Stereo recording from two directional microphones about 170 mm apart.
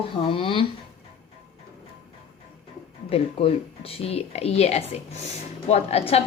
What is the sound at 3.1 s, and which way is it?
Speech, 35° left (ahead or behind).